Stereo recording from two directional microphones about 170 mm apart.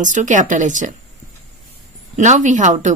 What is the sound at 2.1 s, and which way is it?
Speech, 45° right (ahead or behind).